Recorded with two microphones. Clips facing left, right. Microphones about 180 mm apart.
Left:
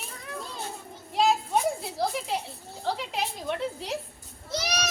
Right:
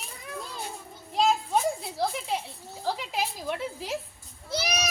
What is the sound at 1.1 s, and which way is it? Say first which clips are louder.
Children playing: left 1 dB; centre (ahead or behind).